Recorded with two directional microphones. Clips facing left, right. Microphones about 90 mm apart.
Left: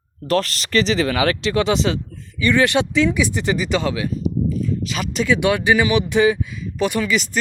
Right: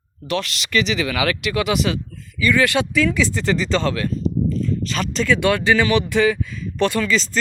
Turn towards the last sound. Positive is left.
turn(degrees=15)  # may be behind; listen again after turning